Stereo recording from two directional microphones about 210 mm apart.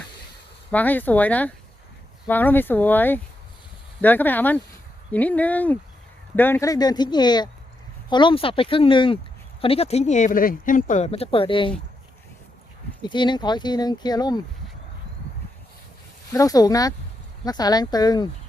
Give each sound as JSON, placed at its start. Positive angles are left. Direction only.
{"t": 0.7, "sound": "speech", "side_deg": 10}
{"t": 13.0, "sound": "speech", "side_deg": 20}
{"t": 16.3, "sound": "speech", "side_deg": 15}